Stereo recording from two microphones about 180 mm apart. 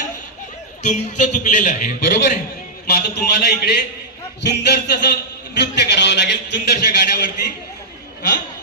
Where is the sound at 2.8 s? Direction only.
65° left (ahead or behind).